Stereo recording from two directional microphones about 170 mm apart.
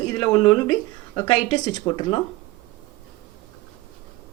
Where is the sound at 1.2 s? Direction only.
25° left (ahead or behind).